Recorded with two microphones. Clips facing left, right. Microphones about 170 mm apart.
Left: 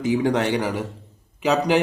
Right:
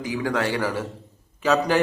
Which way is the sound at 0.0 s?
25° left (ahead or behind).